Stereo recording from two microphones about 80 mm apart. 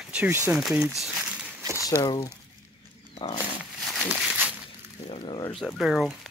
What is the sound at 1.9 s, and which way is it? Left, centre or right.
Speech, left.